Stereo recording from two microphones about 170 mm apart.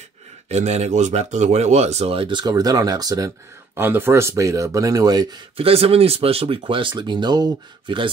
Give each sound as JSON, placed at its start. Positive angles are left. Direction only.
{"t": 0.5, "sound": "speech", "side_deg": -40}